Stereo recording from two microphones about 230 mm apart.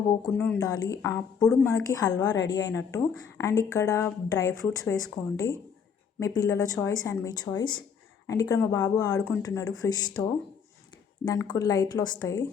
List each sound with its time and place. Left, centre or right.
0.3 s speech: centre